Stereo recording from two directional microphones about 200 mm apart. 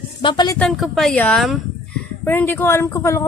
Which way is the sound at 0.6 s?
Centre (ahead or behind).